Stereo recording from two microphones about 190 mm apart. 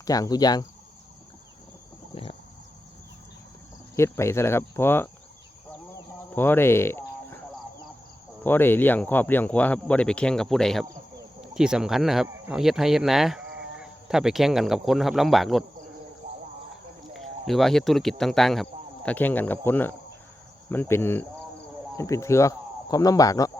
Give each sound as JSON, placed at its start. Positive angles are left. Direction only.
{"t": 0.0, "sound": "speech", "side_deg": 20}
{"t": 3.9, "sound": "speech", "side_deg": 15}
{"t": 6.3, "sound": "cricket", "side_deg": 10}
{"t": 8.4, "sound": "speech", "side_deg": 10}
{"t": 17.2, "sound": "speech", "side_deg": 0}